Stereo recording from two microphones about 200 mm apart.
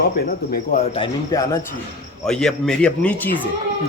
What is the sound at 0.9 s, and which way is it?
Speech, 15° left (ahead or behind).